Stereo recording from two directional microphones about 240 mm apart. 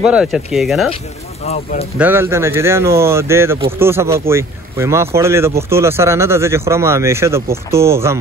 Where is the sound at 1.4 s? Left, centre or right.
Left.